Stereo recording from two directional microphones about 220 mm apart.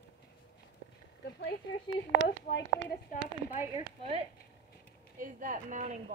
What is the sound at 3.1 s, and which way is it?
Speech, 35° left (ahead or behind).